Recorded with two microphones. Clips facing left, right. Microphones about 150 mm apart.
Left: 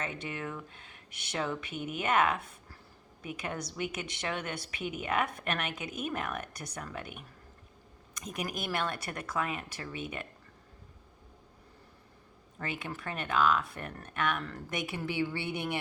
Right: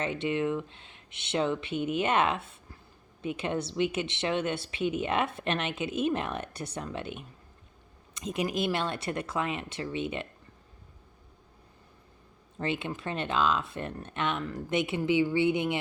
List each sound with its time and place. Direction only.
0.0 s a woman's voice: 25° right (ahead or behind)
12.5 s a woman's voice: 25° right (ahead or behind)